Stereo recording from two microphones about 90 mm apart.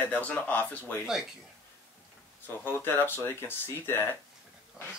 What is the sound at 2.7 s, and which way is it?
Speech, 25° left (ahead or behind).